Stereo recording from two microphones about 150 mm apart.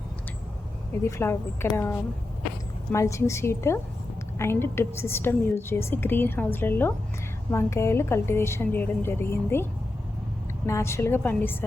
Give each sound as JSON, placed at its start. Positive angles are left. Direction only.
{"t": 1.0, "sound": "a woman's voice", "side_deg": 20}
{"t": 10.7, "sound": "a woman's voice", "side_deg": 20}